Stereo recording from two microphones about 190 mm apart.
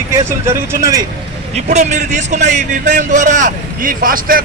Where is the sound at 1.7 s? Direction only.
40° right (ahead or behind).